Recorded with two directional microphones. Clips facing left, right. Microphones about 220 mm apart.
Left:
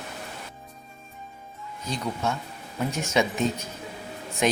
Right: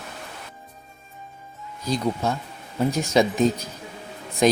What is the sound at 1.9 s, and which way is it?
Speech, 35° right (ahead or behind).